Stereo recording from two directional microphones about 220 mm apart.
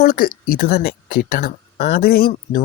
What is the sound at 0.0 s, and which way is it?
Speech, 40° left (ahead or behind).